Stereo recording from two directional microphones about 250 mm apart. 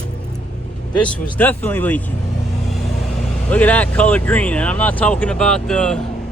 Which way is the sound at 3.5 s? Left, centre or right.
Centre.